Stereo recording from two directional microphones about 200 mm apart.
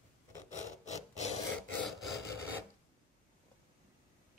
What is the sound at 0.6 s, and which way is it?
Wood, 35° left (ahead or behind).